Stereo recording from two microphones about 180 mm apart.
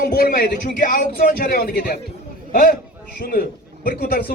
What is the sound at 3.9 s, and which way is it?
Speech, 55° left (ahead or behind).